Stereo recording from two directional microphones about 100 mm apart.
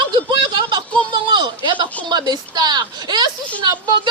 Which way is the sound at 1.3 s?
50° right (ahead or behind).